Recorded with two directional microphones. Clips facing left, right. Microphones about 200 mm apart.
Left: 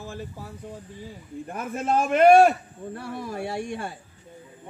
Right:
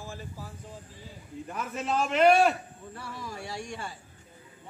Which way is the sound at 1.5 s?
50° left (ahead or behind).